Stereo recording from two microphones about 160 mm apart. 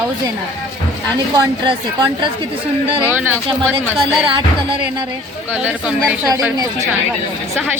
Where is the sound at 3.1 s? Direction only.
15° right (ahead or behind).